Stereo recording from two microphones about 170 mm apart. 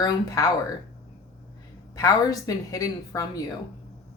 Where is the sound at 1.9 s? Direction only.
20° left (ahead or behind).